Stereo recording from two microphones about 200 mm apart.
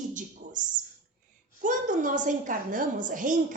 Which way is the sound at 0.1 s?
40° right (ahead or behind).